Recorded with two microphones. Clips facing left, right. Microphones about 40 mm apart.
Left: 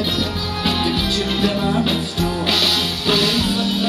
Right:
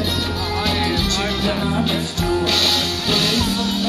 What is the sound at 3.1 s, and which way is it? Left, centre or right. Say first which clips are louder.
Music: left 2 dB; centre.